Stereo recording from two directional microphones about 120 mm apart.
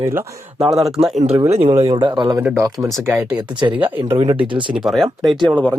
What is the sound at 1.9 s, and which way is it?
Speech, 40° right (ahead or behind).